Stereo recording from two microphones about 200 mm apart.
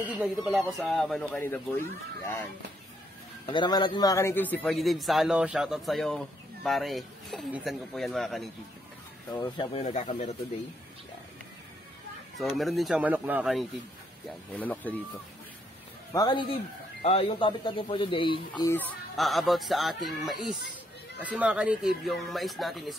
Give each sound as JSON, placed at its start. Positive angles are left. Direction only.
{"t": 0.1, "sound": "a man's voice", "side_deg": -5}
{"t": 3.4, "sound": "a man's voice", "side_deg": 20}
{"t": 9.3, "sound": "speech", "side_deg": 25}
{"t": 9.8, "sound": "speech", "side_deg": 35}
{"t": 12.4, "sound": "a man's voice", "side_deg": 0}
{"t": 14.5, "sound": "speech", "side_deg": 10}
{"t": 16.1, "sound": "speech", "side_deg": 20}
{"t": 18.7, "sound": "a man's voice", "side_deg": 10}